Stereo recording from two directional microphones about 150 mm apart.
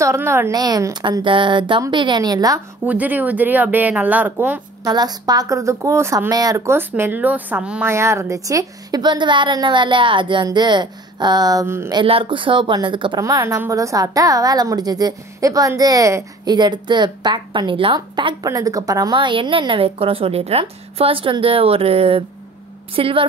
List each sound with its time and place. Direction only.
0.0 s a woman's voice: 20° right (ahead or behind)
2.8 s speech: 10° right (ahead or behind)
4.8 s a woman's voice: 25° right (ahead or behind)
11.9 s a woman's voice: 35° right (ahead or behind)